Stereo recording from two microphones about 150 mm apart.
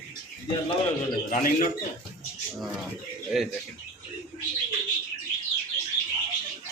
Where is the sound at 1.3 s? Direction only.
70° left (ahead or behind).